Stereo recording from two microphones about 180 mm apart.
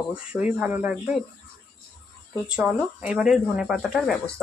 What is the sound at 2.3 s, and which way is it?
Speech, 5° right (ahead or behind).